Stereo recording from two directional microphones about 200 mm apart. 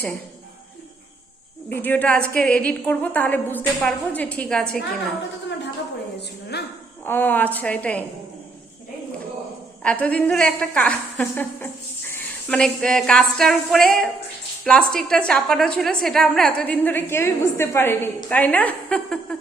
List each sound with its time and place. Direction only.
1.7 s a woman's voice: 10° left (ahead or behind)
6.5 s speech: 55° left (ahead or behind)
7.0 s a woman's voice: 10° left (ahead or behind)
9.8 s a woman's voice: 5° left (ahead or behind)